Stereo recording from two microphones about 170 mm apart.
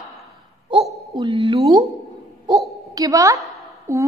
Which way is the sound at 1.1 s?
30° right (ahead or behind).